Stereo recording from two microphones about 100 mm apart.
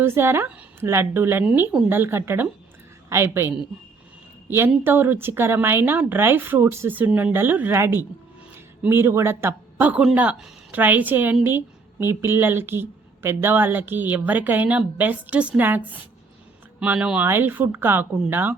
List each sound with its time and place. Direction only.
0.0 s a woman's voice: 25° right (ahead or behind)